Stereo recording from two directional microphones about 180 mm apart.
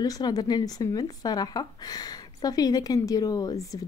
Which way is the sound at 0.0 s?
20° left (ahead or behind).